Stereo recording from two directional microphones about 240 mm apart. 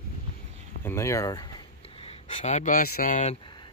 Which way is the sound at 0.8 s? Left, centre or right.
Centre.